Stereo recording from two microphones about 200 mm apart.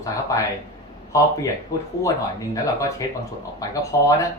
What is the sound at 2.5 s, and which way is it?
Speech, 15° left (ahead or behind).